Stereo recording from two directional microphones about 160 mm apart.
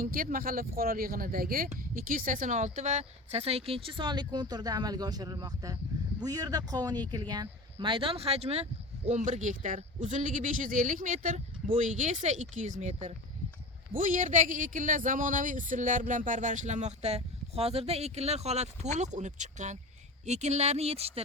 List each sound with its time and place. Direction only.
0.0 s speech: 65° right (ahead or behind); by 21.1 s 40° right (ahead or behind)